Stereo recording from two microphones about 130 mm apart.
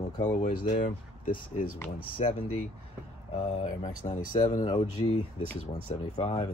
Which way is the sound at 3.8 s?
70° left (ahead or behind).